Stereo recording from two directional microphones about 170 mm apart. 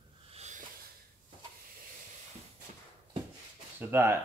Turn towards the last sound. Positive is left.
turn(degrees=-15)  # may be behind; listen again after turning